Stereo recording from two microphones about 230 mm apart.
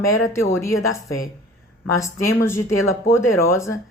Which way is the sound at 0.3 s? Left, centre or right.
Centre.